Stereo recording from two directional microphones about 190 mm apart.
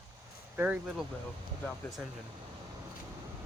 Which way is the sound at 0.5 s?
10° right (ahead or behind).